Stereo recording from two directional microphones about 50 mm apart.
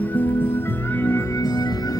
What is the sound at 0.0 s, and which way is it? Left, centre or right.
Music, left.